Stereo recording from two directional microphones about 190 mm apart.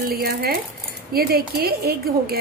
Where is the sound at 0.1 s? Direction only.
55° right (ahead or behind).